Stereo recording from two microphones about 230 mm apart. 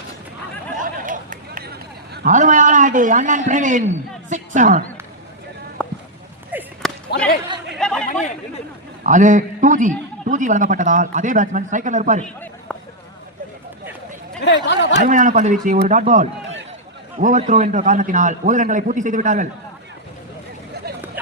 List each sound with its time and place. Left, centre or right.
0.8 s a sound: right
4.3 s speech: right
5.8 s a sound: centre
7.1 s speech: left
7.8 s speech: centre
9.0 s a man's voice: right
12.2 s a sound: centre
14.4 s speech: left
15.0 s a man's voice: right
20.9 s vehicle: right